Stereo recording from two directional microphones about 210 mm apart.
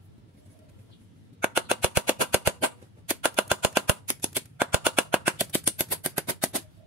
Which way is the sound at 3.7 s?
5° right (ahead or behind).